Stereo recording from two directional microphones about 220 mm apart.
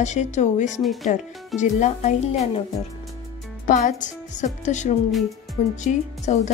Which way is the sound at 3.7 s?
35° left (ahead or behind).